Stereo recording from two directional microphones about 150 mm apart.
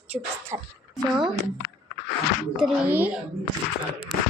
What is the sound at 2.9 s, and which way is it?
Speech, 10° right (ahead or behind).